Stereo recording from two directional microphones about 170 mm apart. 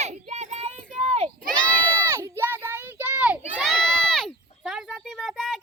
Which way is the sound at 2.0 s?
20° right (ahead or behind).